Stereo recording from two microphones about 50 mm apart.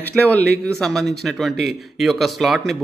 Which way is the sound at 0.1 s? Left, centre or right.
Left.